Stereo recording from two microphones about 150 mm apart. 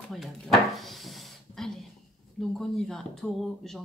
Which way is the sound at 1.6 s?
Centre (ahead or behind).